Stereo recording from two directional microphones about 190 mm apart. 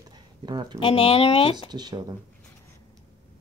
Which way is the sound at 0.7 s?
30° left (ahead or behind).